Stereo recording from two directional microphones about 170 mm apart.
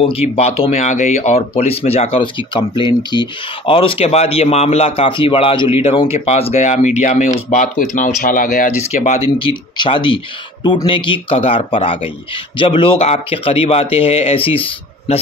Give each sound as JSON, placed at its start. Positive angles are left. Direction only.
{"t": 0.0, "sound": "speech", "side_deg": 35}
{"t": 9.4, "sound": "speech", "side_deg": 30}